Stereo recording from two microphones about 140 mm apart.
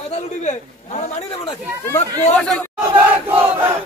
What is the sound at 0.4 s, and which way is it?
Speech, 55° left (ahead or behind).